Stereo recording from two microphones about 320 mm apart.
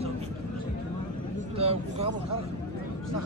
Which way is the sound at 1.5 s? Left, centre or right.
Centre.